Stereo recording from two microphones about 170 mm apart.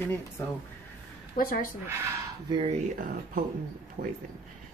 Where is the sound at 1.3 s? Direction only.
55° left (ahead or behind).